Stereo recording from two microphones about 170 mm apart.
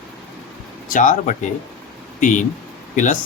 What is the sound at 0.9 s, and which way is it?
A man's voice, 50° left (ahead or behind).